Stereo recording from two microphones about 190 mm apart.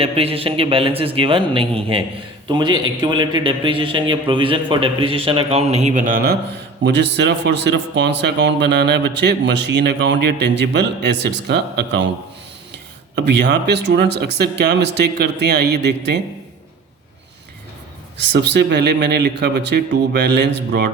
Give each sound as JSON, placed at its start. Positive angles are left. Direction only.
{"t": 0.0, "sound": "a man's voice", "side_deg": -30}
{"t": 6.8, "sound": "a man's voice", "side_deg": -60}
{"t": 13.1, "sound": "a man's voice", "side_deg": -65}
{"t": 18.3, "sound": "a man's voice", "side_deg": -60}